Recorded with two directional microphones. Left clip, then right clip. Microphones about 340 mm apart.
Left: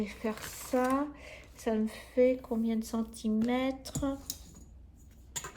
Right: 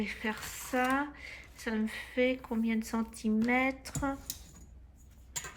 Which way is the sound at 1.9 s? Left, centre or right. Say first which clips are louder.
Left 4 dB; right.